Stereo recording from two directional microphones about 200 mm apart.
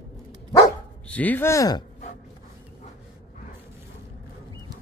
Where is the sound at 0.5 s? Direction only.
10° left (ahead or behind).